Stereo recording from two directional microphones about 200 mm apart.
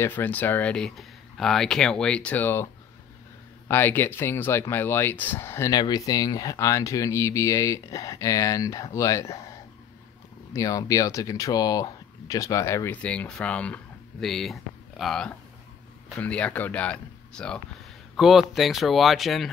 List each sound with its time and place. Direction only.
0.0 s speech: 10° left (ahead or behind)
10.5 s speech: 15° left (ahead or behind); by 19.5 s centre (ahead or behind)